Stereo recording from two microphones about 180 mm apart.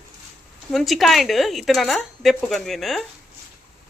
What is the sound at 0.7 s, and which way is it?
Speech, centre (ahead or behind).